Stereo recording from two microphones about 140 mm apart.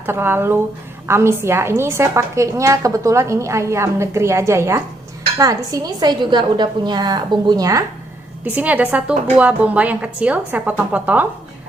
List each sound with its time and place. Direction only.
0.0 s a woman's voice: 15° right (ahead or behind)
8.5 s a woman's voice: 10° right (ahead or behind)